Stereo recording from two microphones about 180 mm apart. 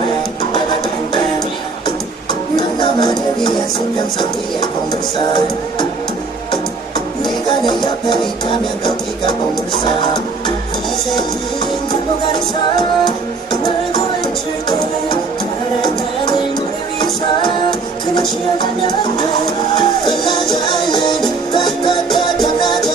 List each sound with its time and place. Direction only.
2.5 s music: 25° left (ahead or behind)
7.6 s music: 25° left (ahead or behind)
13.0 s music: 25° left (ahead or behind)
19.8 s music: 25° left (ahead or behind)